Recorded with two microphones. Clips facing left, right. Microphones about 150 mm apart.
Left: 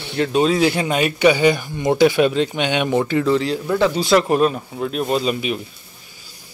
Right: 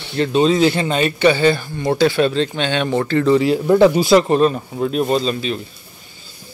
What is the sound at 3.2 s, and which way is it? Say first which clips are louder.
Speech: right 5 dB; 5° right (ahead or behind).